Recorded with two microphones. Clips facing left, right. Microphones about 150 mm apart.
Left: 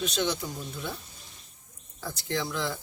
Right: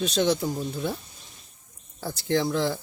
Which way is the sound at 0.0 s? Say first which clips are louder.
Right 6 dB; 35° right (ahead or behind).